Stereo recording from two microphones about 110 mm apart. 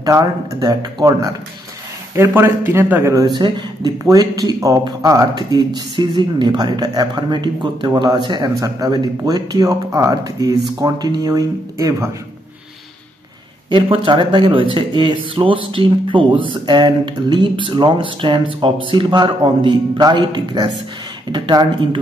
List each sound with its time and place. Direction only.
0.0 s speech: 30° right (ahead or behind)
2.1 s speech: 25° right (ahead or behind)
3.3 s speech: 40° right (ahead or behind)
13.7 s speech: 50° right (ahead or behind)